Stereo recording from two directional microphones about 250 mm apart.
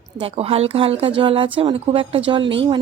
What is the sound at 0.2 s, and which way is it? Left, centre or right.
A woman's voice, right.